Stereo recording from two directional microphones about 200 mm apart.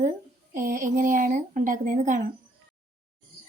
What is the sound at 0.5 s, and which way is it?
Speech, 45° right (ahead or behind).